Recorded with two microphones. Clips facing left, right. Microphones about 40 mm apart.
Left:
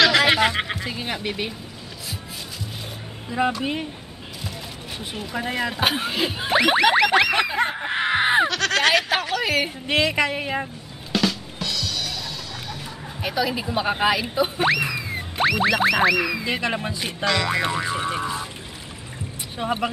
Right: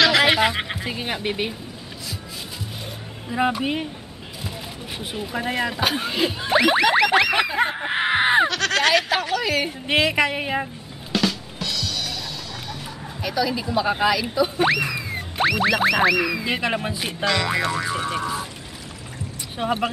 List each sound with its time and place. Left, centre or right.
0.0 s music: centre
0.7 s speech: centre
3.3 s speech: centre
5.2 s music: centre
6.5 s a sound: centre
9.8 s music: centre
13.2 s speech: centre
14.6 s music: centre
17.6 s speech: centre
19.5 s speech: centre